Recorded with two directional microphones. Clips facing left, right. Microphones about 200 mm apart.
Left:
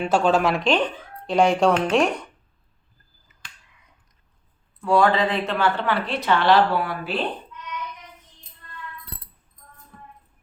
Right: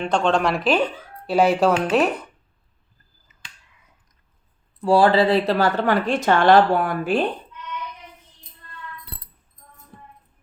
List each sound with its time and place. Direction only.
0.0 s speech: 5° left (ahead or behind)
4.8 s speech: 30° right (ahead or behind); by 7.3 s 45° right (ahead or behind)